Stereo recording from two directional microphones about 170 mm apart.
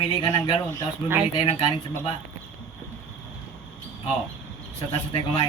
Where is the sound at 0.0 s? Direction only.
25° left (ahead or behind).